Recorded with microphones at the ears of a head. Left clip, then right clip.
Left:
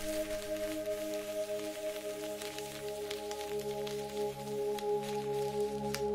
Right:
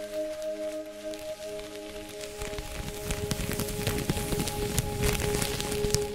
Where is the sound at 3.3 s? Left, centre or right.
Right.